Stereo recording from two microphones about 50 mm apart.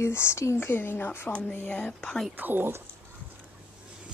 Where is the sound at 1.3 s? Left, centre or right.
Left.